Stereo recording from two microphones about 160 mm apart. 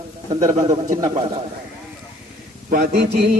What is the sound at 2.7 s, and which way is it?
Speech, 75° right (ahead or behind).